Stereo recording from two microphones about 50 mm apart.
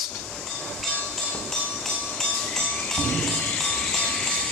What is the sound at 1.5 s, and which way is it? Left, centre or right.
Train, centre.